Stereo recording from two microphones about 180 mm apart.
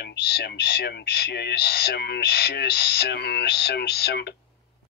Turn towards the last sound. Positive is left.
turn(degrees=65)  # may be behind; listen again after turning